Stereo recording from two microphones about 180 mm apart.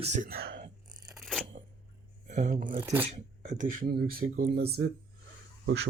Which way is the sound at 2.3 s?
45° right (ahead or behind).